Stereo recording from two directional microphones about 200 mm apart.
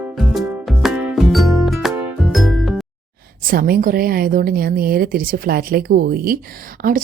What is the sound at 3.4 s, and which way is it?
A woman's voice, 45° right (ahead or behind).